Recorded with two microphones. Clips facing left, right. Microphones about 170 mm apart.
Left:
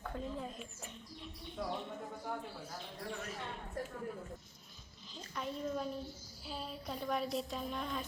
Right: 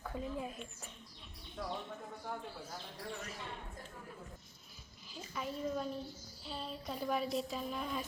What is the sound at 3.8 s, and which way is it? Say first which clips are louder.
Speech: left 10 dB; 75° left (ahead or behind).